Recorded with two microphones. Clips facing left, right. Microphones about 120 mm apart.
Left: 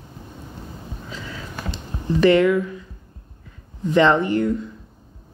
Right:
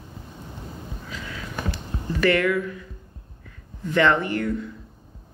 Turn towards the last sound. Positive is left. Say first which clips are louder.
# left 5 dB
turn(degrees=20)  # may be behind; listen again after turning